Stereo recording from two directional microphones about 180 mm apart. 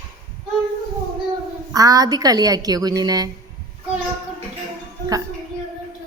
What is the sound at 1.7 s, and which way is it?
Speech, 20° right (ahead or behind).